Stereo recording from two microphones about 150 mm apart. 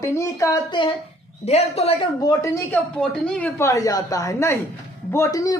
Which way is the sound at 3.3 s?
10° left (ahead or behind).